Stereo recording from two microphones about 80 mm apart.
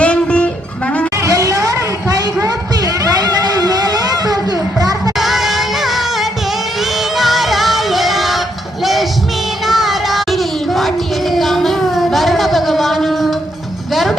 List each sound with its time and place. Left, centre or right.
0.0 s music: centre
1.2 s a sound: right
5.1 s music: centre
9.6 s child singing: centre
13.9 s music: centre